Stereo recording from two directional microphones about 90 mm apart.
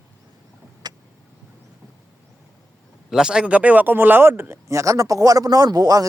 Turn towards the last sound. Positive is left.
turn(degrees=-40)  # may be behind; listen again after turning